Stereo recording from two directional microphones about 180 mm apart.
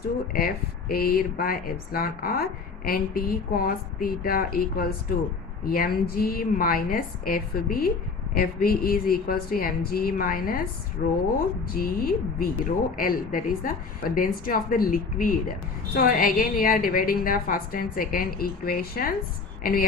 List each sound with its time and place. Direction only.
0.3 s a woman's voice: 55° left (ahead or behind)